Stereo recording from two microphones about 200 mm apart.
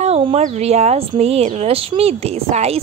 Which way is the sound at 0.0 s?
30° right (ahead or behind).